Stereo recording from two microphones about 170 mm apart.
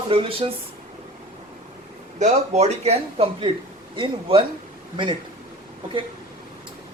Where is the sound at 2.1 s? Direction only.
40° right (ahead or behind).